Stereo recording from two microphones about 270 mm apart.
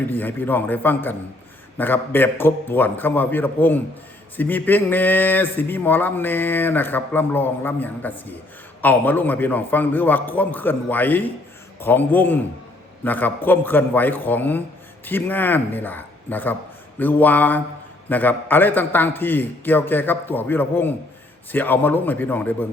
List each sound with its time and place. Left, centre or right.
0.1 s speech: centre